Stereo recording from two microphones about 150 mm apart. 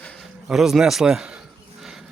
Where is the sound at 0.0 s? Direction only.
Centre (ahead or behind).